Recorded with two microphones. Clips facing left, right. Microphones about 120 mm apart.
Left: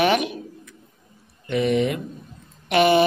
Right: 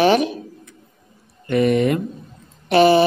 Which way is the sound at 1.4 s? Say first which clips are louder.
Right 4 dB; 50° right (ahead or behind).